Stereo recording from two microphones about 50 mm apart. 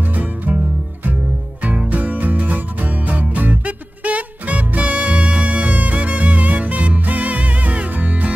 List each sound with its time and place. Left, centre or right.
0.1 s music: right
1.6 s music: right